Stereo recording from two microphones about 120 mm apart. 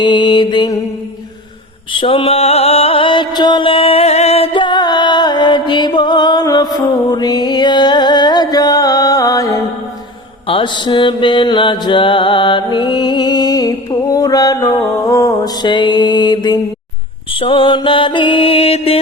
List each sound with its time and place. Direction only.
0.0 s mantra: 40° left (ahead or behind)
1.9 s mantra: 45° left (ahead or behind); by 9.6 s 30° left (ahead or behind)
10.4 s mantra: 45° left (ahead or behind); by 15.3 s 25° left (ahead or behind)
15.6 s mantra: 40° left (ahead or behind)